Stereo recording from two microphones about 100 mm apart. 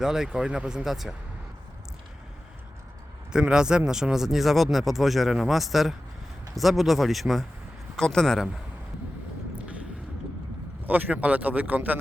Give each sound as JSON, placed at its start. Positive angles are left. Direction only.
{"t": 0.0, "sound": "speech", "side_deg": -5}
{"t": 3.3, "sound": "speech", "side_deg": -10}
{"t": 10.8, "sound": "speech", "side_deg": -15}